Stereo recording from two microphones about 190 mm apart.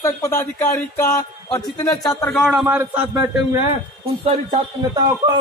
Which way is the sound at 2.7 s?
10° right (ahead or behind).